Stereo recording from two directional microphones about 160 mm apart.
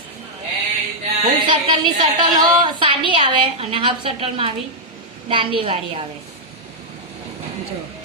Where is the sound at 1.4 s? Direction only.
30° right (ahead or behind).